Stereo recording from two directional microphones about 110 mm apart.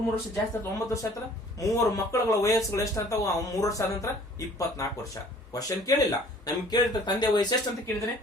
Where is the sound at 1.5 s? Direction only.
30° left (ahead or behind).